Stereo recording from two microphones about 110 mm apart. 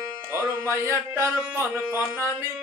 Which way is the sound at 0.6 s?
25° right (ahead or behind).